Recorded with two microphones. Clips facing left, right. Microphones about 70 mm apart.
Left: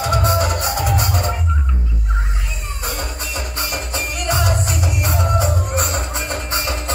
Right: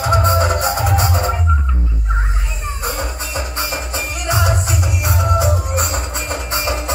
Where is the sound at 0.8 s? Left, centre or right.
Centre.